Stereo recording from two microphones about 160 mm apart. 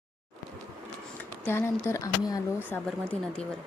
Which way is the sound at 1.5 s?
15° left (ahead or behind).